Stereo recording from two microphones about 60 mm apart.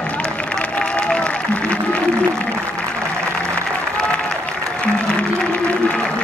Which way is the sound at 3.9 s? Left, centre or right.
Centre.